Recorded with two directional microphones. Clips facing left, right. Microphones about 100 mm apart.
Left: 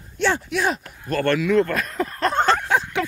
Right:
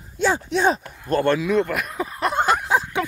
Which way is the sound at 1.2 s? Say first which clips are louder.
Left 3 dB; 20° right (ahead or behind).